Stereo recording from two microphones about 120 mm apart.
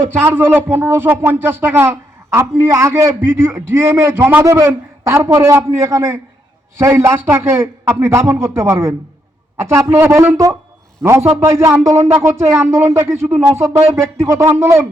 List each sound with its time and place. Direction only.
0.2 s speech: 20° right (ahead or behind)